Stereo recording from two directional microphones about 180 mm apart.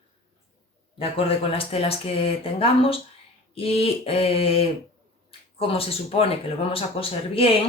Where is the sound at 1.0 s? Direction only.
30° left (ahead or behind).